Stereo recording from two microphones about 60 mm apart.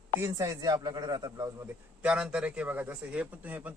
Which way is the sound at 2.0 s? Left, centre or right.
Centre.